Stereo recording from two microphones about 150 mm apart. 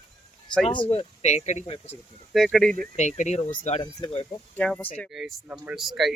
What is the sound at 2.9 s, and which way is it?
Speech, 50° left (ahead or behind).